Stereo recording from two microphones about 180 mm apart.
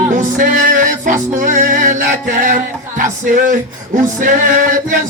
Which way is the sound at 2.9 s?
45° right (ahead or behind).